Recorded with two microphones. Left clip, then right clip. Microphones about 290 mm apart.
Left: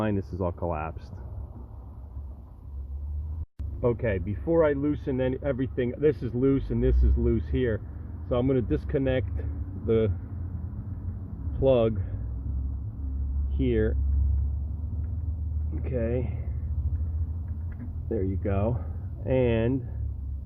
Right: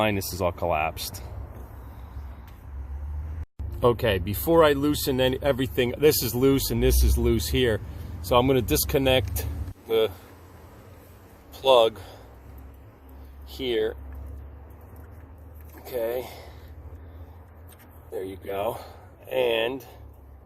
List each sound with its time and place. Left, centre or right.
0.0 s speech: centre
3.9 s speech: centre
4.4 s speech: right
4.7 s speech: centre
11.6 s speech: centre
13.6 s speech: centre
15.9 s speech: centre
18.3 s speech: centre